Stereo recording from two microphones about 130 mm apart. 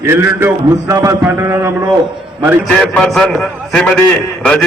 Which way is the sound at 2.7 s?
5° left (ahead or behind).